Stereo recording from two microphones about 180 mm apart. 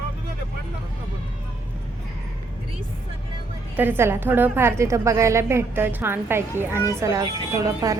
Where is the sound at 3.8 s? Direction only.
10° right (ahead or behind).